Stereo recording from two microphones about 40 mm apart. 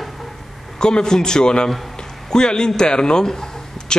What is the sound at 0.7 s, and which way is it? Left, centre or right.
Speech, centre.